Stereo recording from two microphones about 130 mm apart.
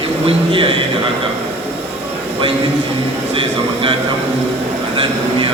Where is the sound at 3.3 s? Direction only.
45° right (ahead or behind).